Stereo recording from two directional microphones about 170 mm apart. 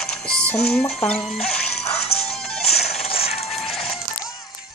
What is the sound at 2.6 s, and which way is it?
Music, 40° left (ahead or behind).